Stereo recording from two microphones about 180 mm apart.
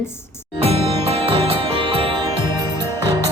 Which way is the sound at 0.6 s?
30° right (ahead or behind).